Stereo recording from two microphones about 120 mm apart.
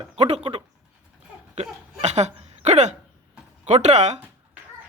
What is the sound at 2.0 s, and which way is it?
Hiccup, 70° right (ahead or behind).